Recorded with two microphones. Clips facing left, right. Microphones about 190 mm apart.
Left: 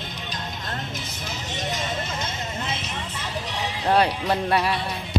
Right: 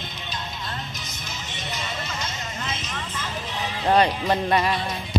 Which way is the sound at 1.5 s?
45° left (ahead or behind).